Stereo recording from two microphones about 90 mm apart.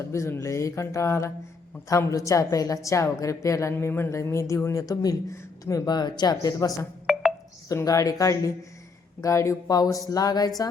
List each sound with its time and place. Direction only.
0.0 s a woman's voice: 35° left (ahead or behind)
5.4 s a sound: 30° left (ahead or behind)
5.8 s speech: 50° left (ahead or behind)
7.1 s telephone dialing: 5° left (ahead or behind)
7.7 s a woman's voice: 35° left (ahead or behind)